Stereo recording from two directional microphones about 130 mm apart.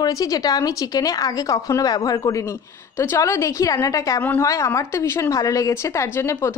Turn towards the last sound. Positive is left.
turn(degrees=20)  # may be behind; listen again after turning